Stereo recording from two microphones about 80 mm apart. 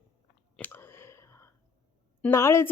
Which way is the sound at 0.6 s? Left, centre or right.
Left.